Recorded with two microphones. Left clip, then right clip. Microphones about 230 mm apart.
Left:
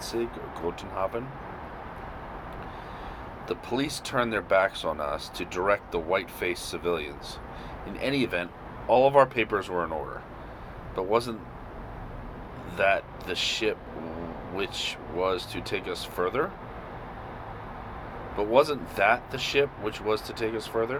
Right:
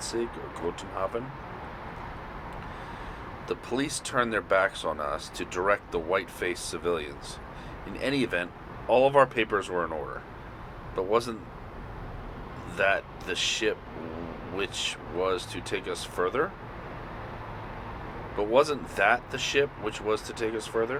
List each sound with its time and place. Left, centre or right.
0.0 s vehicle: left
0.9 s speech: left
3.5 s speech: left
10.9 s speech: left
12.7 s speech: left
18.3 s speech: left